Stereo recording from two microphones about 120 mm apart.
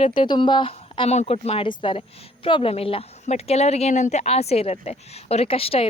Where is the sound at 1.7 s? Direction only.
45° left (ahead or behind).